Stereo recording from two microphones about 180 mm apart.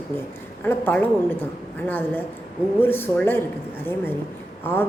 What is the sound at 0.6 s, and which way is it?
A woman's voice, 10° left (ahead or behind).